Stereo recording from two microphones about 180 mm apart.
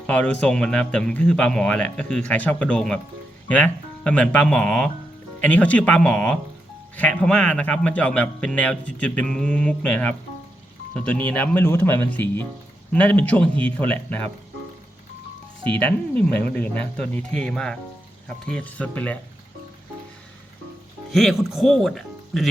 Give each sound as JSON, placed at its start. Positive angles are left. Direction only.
{"t": 0.1, "sound": "a man's voice", "side_deg": 5}
{"t": 15.8, "sound": "a man's voice", "side_deg": 10}
{"t": 21.1, "sound": "speech", "side_deg": 0}